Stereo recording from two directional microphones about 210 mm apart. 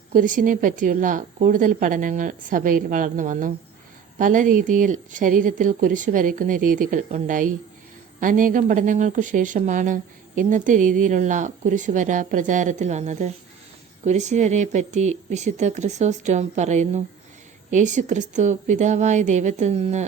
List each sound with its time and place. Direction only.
0.1 s speech: 40° right (ahead or behind)